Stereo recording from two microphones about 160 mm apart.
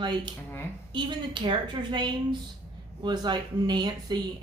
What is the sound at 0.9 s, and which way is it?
A woman's voice, 30° right (ahead or behind).